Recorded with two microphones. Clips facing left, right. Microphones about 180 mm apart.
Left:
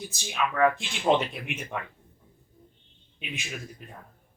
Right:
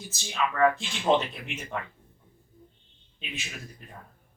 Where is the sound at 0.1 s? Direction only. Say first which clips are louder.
Right 2 dB; 15° left (ahead or behind).